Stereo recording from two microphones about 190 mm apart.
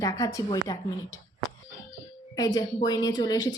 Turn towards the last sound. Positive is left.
turn(degrees=20)  # may be behind; listen again after turning